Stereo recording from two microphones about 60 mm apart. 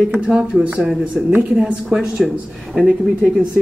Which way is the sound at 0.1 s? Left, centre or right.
Centre.